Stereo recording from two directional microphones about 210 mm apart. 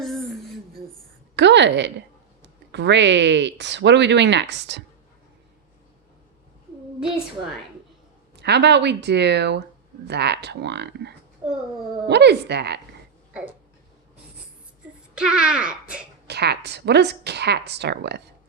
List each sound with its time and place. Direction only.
0.0 s a sound: centre (ahead or behind)
1.4 s a woman's voice: 55° right (ahead or behind)
8.4 s a woman's voice: 55° right (ahead or behind)
11.4 s a child's voice: 10° right (ahead or behind)
12.0 s a woman's voice: 55° right (ahead or behind)
15.1 s a child's voice: 5° right (ahead or behind)
16.2 s a woman's voice: 50° right (ahead or behind)